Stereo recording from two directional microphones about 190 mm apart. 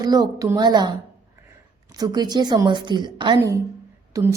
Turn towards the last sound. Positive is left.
turn(degrees=-15)  # may be behind; listen again after turning